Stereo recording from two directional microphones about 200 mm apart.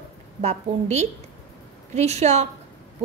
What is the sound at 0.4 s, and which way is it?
A woman's voice, 35° right (ahead or behind).